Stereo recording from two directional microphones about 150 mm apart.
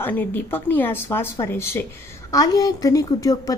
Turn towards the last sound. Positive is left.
turn(degrees=25)  # may be behind; listen again after turning